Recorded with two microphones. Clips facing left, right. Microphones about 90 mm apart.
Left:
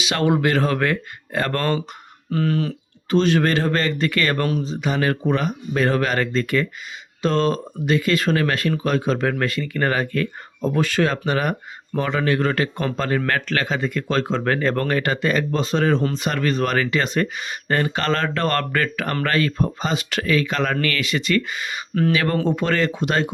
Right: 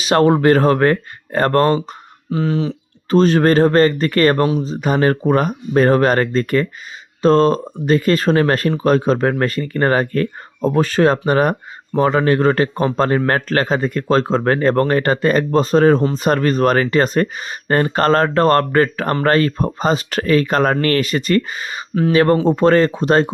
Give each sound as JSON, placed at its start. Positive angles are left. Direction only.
{"t": 0.0, "sound": "speech", "side_deg": -40}
{"t": 2.3, "sound": "speech", "side_deg": -20}
{"t": 3.1, "sound": "speech", "side_deg": -40}
{"t": 4.4, "sound": "speech", "side_deg": -20}
{"t": 4.6, "sound": "speech", "side_deg": -40}